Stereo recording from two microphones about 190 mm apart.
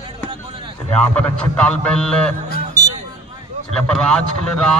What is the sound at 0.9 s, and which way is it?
A man's voice, 5° left (ahead or behind).